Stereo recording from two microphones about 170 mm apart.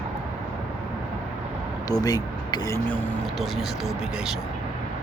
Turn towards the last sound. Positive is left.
turn(degrees=0)  # may be behind; listen again after turning